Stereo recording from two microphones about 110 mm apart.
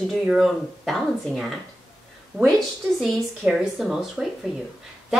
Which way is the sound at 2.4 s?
Centre (ahead or behind).